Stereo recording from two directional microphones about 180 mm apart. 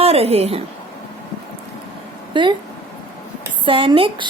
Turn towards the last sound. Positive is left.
turn(degrees=-30)  # may be behind; listen again after turning